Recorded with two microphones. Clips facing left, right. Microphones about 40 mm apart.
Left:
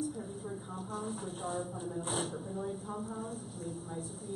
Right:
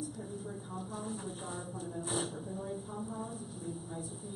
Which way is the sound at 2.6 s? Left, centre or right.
Centre.